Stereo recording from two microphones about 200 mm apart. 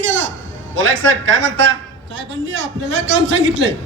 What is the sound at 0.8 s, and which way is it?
A man's voice, 70° right (ahead or behind).